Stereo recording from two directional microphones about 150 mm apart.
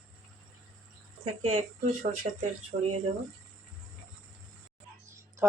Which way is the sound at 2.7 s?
35° right (ahead or behind).